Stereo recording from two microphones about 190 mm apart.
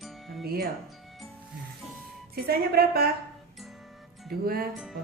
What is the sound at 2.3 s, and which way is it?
Speech, 55° right (ahead or behind).